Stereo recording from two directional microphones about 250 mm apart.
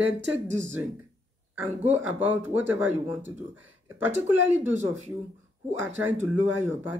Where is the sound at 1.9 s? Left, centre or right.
Centre.